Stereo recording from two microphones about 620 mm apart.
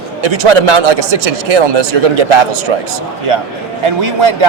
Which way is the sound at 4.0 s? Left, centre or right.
Right.